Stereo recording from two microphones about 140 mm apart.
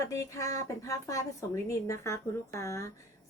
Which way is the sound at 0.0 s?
20° left (ahead or behind).